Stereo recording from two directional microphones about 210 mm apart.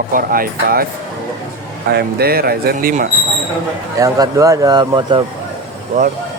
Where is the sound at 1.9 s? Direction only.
50° right (ahead or behind).